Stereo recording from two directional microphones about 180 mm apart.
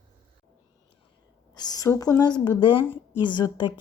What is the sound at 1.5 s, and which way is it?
Speech, 20° left (ahead or behind).